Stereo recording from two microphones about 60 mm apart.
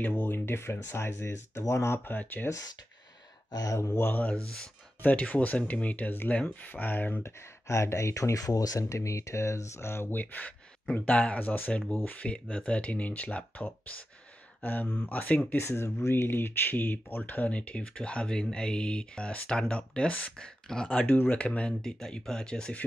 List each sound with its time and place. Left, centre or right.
0.0 s speech: left
0.3 s speech: left
2.0 s speech: left
3.5 s speech: left
4.0 s speech: left
7.2 s speech: left
8.8 s speech: left
10.1 s speech: left
14.6 s speech: left
15.6 s speech: left; by 21.1 s centre
21.1 s speech: left; by 22.8 s centre